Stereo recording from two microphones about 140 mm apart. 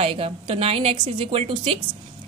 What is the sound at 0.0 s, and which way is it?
A woman's voice, 40° right (ahead or behind).